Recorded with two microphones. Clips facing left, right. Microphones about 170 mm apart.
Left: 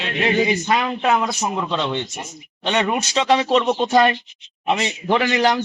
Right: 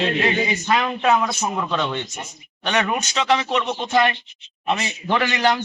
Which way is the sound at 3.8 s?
35° left (ahead or behind).